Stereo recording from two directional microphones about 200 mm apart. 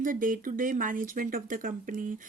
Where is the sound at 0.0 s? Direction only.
40° right (ahead or behind).